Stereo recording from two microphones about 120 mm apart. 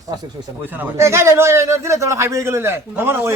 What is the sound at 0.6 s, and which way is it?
A man's voice, 15° right (ahead or behind).